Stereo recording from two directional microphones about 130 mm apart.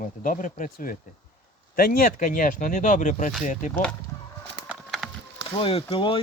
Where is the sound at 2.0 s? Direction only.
90° left.